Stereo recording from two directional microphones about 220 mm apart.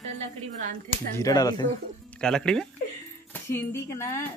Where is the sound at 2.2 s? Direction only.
5° left (ahead or behind).